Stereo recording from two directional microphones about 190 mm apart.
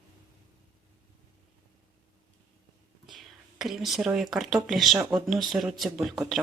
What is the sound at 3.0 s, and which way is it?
Speech, centre (ahead or behind).